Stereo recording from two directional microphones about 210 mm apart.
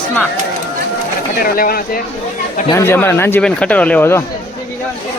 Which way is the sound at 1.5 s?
45° left (ahead or behind).